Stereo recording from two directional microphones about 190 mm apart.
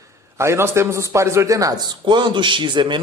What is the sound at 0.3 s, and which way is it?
A man's voice, 15° right (ahead or behind).